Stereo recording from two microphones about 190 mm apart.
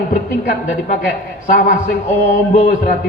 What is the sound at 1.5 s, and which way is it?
A woman's voice, 50° left (ahead or behind).